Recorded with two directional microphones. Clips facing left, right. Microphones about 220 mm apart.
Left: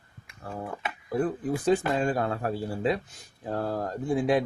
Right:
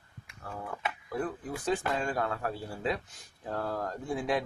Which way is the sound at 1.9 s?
30° left (ahead or behind).